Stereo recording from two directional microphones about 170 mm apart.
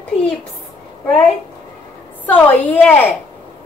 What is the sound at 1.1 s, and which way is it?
A woman's voice, centre (ahead or behind).